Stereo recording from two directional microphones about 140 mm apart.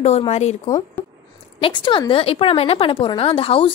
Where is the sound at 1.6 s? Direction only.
35° left (ahead or behind).